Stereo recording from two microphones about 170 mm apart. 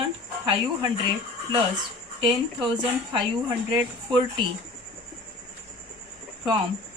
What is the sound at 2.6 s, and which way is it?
Speech, 30° right (ahead or behind).